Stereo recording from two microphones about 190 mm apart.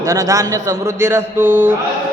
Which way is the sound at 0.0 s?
20° right (ahead or behind).